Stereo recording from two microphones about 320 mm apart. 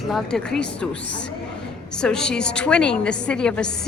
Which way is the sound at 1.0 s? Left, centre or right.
Left.